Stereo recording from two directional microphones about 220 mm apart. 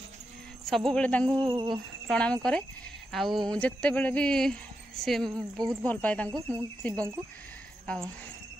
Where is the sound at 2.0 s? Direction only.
5° left (ahead or behind).